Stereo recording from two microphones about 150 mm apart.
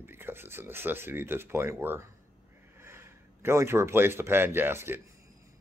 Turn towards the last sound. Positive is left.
turn(degrees=-15)  # may be behind; listen again after turning